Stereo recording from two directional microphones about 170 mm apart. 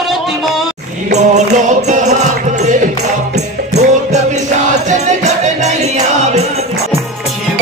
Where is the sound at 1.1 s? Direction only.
40° right (ahead or behind).